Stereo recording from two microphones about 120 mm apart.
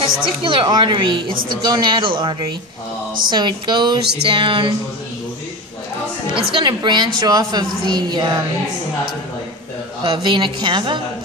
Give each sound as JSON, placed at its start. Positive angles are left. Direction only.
{"t": 0.4, "sound": "a woman's voice", "side_deg": -45}
{"t": 6.3, "sound": "a woman's voice", "side_deg": -45}
{"t": 10.0, "sound": "a woman's voice", "side_deg": -45}